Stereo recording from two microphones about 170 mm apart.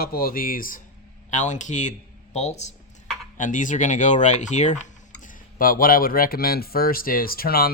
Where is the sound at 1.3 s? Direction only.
45° left (ahead or behind).